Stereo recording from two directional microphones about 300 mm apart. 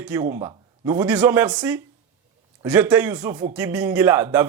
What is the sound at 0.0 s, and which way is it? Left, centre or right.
A man's voice, centre.